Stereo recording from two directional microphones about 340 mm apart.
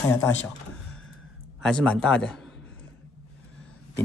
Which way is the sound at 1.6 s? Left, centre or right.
Centre.